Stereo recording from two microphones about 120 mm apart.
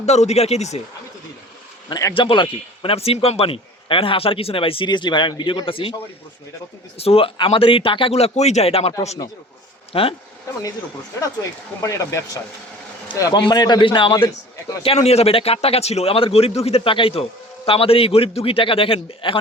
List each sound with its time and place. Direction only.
0.0 s speech: 70° left (ahead or behind)
1.9 s speech: 30° left (ahead or behind)
2.1 s a man's voice: 45° left (ahead or behind)
9.9 s a man's voice: 50° left (ahead or behind)
11.8 s a man's voice: 25° left (ahead or behind); by 14.3 s 45° left (ahead or behind)
14.9 s a man's voice: 60° left (ahead or behind)